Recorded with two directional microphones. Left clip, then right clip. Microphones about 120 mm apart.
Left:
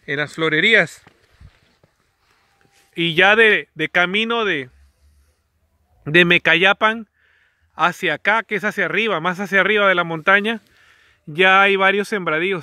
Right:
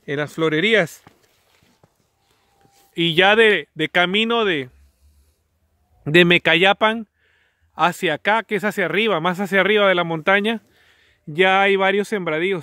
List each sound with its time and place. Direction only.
0.0 s speech: 25° right (ahead or behind)
2.9 s speech: 20° right (ahead or behind); by 4.7 s 35° right (ahead or behind)
6.0 s a man's voice: 30° right (ahead or behind); by 12.5 s 15° right (ahead or behind)